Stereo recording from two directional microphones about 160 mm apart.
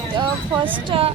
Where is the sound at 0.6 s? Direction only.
35° right (ahead or behind).